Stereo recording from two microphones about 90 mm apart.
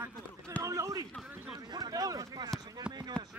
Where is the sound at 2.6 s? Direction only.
45° right (ahead or behind).